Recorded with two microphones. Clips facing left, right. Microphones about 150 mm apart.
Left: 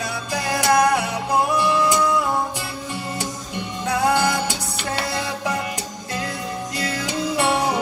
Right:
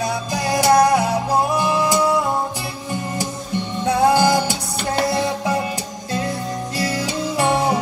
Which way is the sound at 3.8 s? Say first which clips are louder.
Right 4 dB; 30° right (ahead or behind).